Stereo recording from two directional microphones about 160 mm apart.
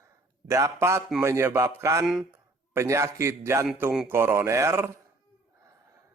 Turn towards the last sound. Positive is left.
turn(degrees=-15)  # may be behind; listen again after turning